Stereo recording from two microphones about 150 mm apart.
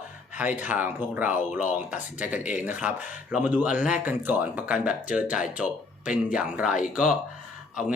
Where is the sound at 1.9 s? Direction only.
10° right (ahead or behind).